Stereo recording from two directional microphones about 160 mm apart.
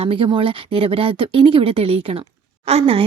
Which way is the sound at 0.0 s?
35° right (ahead or behind).